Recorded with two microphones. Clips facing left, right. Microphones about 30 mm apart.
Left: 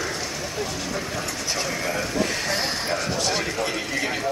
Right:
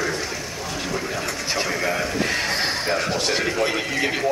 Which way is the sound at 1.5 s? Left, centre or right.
Right.